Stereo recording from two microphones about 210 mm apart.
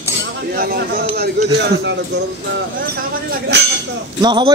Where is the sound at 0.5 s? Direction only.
45° right (ahead or behind).